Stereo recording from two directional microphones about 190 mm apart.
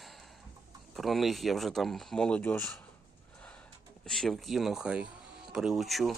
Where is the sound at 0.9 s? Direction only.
Centre (ahead or behind).